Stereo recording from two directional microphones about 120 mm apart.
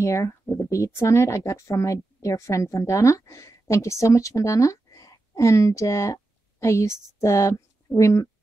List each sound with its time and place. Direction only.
0.0 s speech: 25° left (ahead or behind)